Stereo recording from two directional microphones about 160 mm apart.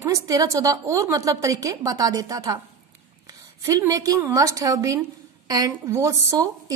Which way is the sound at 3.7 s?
20° right (ahead or behind).